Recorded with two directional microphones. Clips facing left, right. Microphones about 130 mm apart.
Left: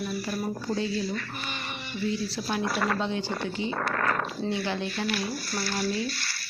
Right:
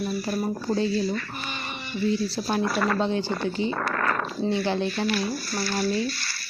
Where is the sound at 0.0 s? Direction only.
40° right (ahead or behind).